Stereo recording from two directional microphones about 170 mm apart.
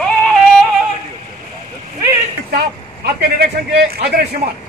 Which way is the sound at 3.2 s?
65° right (ahead or behind).